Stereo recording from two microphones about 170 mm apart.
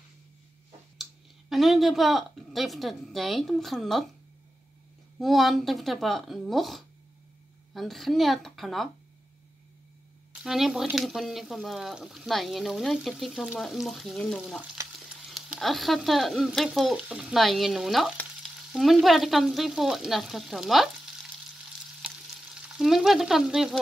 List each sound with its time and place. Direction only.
1.5 s speech: centre (ahead or behind)
5.2 s speech: centre (ahead or behind)
10.4 s speech: centre (ahead or behind)
14.8 s frying: 20° right (ahead or behind)
15.2 s speech: centre (ahead or behind)
22.0 s stir: 5° right (ahead or behind)